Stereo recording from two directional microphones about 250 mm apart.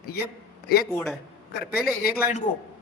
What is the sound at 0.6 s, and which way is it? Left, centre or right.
Speech, left.